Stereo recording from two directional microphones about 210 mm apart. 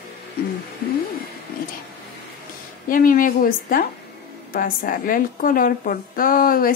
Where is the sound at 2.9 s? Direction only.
40° left (ahead or behind).